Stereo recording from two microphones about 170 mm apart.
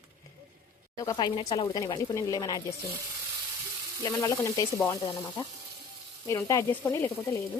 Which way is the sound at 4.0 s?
20° left (ahead or behind).